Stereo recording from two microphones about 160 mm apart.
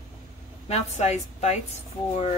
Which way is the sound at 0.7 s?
45° left (ahead or behind).